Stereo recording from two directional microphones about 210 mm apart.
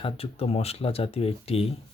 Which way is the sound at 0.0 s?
30° left (ahead or behind).